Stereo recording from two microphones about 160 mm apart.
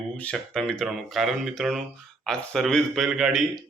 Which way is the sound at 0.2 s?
5° left (ahead or behind).